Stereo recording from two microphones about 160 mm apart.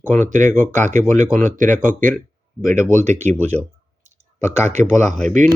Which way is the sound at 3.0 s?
45° right (ahead or behind).